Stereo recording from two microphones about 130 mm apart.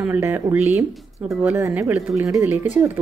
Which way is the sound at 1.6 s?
20° right (ahead or behind).